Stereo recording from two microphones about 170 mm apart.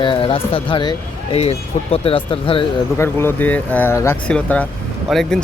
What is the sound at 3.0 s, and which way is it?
Speech, 15° left (ahead or behind).